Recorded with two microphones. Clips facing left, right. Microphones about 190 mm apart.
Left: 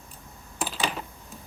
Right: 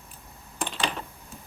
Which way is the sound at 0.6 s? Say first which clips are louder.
Left 1 dB; 5° left (ahead or behind).